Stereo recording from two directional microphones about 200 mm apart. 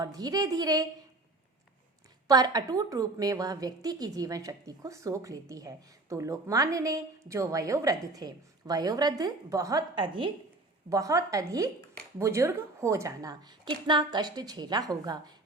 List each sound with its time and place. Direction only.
0.0 s a woman's voice: 20° right (ahead or behind)
2.2 s a woman's voice: 20° right (ahead or behind)